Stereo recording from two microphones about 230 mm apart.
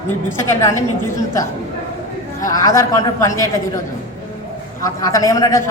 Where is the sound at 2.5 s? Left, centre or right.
Centre.